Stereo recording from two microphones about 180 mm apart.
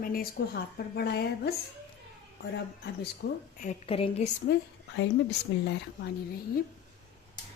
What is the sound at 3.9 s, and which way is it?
Speech, 30° left (ahead or behind).